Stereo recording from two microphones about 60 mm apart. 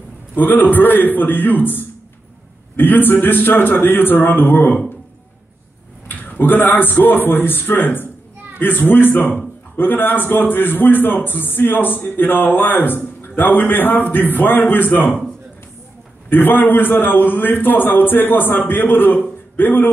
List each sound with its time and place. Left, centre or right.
0.4 s a man's voice: left
6.0 s a man's voice: left
16.3 s a man's voice: left